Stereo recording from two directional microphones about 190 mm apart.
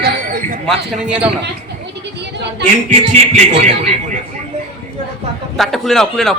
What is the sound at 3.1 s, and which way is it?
Speech, 40° right (ahead or behind).